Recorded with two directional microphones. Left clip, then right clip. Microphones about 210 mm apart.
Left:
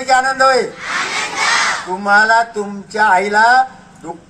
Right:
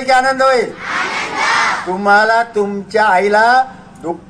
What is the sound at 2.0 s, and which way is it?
A man's voice, 35° right (ahead or behind).